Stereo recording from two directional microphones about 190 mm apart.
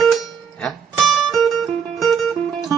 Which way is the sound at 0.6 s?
Centre (ahead or behind).